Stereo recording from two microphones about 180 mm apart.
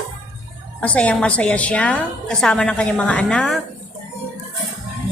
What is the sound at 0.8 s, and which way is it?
A woman's voice, 5° left (ahead or behind).